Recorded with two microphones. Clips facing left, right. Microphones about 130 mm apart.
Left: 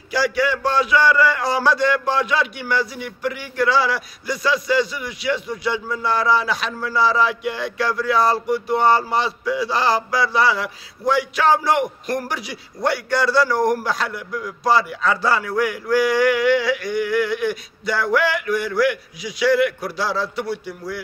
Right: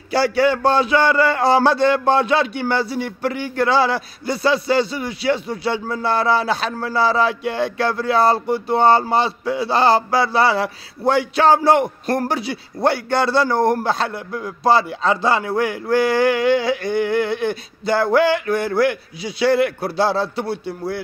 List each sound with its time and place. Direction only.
0.1 s a man's voice: 30° right (ahead or behind)